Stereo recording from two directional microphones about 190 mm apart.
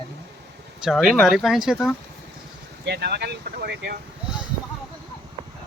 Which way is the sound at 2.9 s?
60° right (ahead or behind).